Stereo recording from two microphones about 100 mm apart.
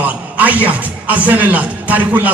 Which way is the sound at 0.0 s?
15° right (ahead or behind).